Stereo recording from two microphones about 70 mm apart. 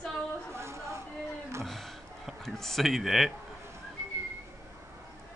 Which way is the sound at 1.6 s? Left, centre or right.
Centre.